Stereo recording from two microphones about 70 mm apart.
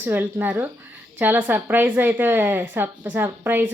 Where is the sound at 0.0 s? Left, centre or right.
Right.